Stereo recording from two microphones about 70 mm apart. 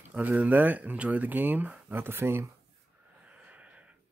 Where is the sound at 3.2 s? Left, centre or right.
Centre.